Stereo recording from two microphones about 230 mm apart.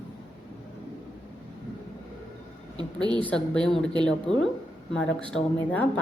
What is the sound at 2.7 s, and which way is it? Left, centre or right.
Speech, centre.